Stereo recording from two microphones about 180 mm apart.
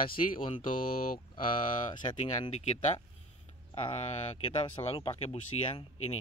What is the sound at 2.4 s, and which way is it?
Speech, 35° left (ahead or behind).